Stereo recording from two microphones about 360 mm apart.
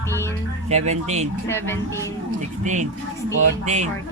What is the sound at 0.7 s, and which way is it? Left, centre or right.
Speech, centre.